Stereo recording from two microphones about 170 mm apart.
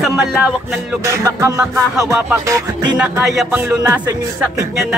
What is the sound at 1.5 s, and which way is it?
Music, 5° right (ahead or behind).